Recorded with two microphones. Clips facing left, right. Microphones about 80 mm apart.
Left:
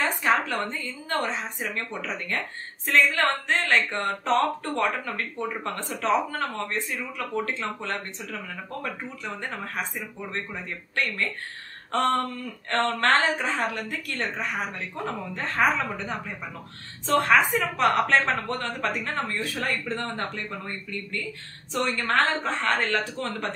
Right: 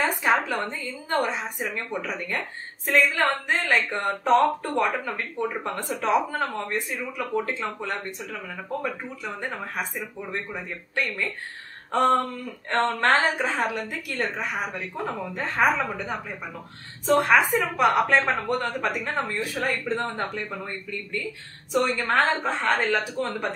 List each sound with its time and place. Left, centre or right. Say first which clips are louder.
0.0 s a woman's voice: right 1 dB; centre
11.9 s a woman's voice: right 3 dB; centre
17.2 s a woman's voice: even; centre
18.9 s a woman's voice: right 1 dB; centre